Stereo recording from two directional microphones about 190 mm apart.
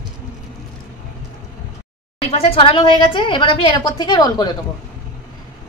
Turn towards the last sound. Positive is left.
turn(degrees=25)  # may be behind; listen again after turning